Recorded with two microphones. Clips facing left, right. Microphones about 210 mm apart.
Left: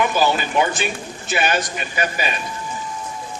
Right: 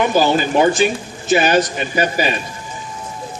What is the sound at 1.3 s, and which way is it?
Speech, 35° right (ahead or behind).